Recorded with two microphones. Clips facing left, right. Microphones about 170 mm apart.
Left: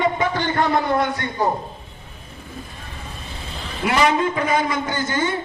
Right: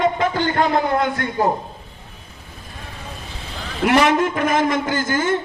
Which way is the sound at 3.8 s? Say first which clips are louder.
Right 3 dB; 75° right (ahead or behind).